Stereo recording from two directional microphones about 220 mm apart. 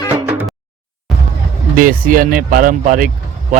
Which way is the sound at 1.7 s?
40° right (ahead or behind).